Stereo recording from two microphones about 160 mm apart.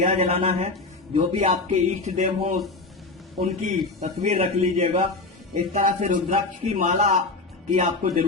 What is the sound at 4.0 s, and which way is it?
Speech, 45° right (ahead or behind).